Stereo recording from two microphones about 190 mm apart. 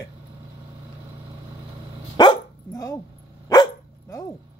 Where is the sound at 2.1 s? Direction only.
20° left (ahead or behind).